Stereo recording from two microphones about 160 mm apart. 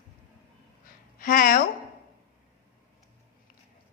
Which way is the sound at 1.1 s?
60° left (ahead or behind).